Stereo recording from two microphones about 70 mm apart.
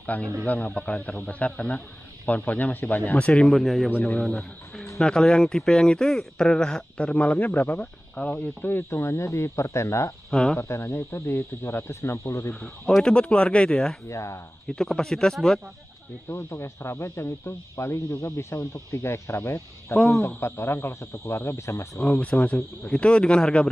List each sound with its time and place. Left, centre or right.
0.0 s a man's voice: left
10.3 s speech: centre
10.6 s speech: left
12.5 s speech: centre
14.0 s speech: left
14.7 s speech: centre
16.3 s speech: left
21.9 s speech: centre